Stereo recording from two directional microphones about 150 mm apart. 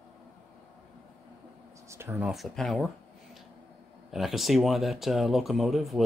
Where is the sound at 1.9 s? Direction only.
15° right (ahead or behind).